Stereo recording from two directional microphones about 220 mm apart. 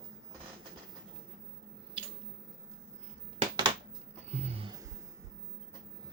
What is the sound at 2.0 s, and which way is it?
Squish, 25° right (ahead or behind).